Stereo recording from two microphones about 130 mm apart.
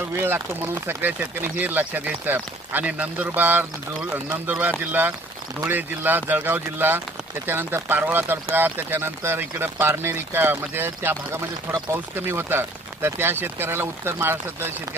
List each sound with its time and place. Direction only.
0.2 s speech: 15° right (ahead or behind)